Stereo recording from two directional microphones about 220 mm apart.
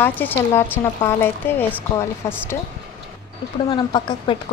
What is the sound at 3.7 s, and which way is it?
Speech, 20° left (ahead or behind).